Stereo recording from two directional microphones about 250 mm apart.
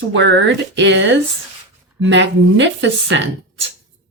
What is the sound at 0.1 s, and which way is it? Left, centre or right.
A woman's voice, right.